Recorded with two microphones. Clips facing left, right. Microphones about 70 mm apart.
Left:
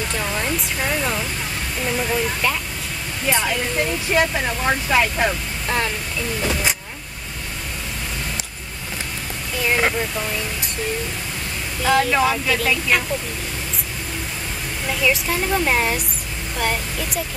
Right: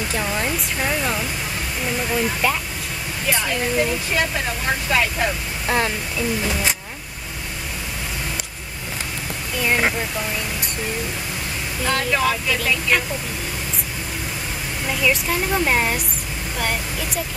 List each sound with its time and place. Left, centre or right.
0.1 s a sound: centre
1.9 s speech: centre
5.7 s speech: centre
9.6 s speech: centre
11.8 s speech: centre
14.9 s speech: centre